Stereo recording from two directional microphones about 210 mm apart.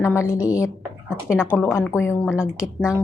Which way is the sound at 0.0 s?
15° left (ahead or behind).